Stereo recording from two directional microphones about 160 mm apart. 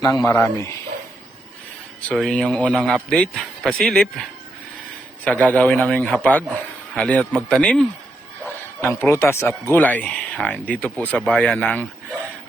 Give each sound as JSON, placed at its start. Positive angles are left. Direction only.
{"t": 0.0, "sound": "a man's voice", "side_deg": 20}
{"t": 2.0, "sound": "a man's voice", "side_deg": 5}